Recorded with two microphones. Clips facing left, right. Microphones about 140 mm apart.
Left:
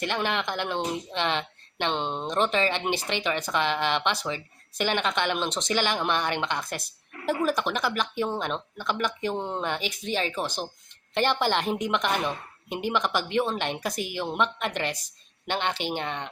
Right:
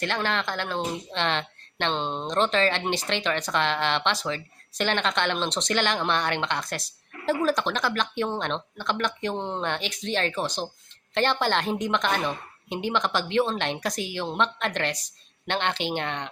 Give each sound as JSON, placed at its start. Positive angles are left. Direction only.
{"t": 0.0, "sound": "a woman's voice", "side_deg": 15}